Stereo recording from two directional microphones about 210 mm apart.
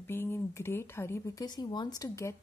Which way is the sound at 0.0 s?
10° left (ahead or behind).